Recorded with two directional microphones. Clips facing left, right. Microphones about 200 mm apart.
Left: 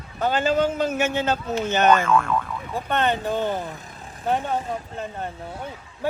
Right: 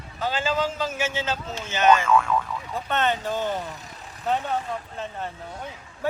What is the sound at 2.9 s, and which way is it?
Speech, 55° left (ahead or behind).